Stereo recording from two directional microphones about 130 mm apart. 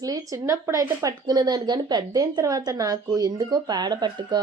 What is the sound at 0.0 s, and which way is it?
A woman's voice, 25° right (ahead or behind).